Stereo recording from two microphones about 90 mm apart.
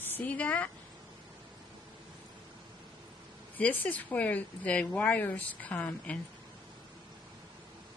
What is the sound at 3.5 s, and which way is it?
A woman's voice, 20° left (ahead or behind).